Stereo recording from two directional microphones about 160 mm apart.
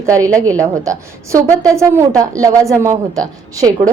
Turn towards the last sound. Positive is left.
turn(degrees=-20)  # may be behind; listen again after turning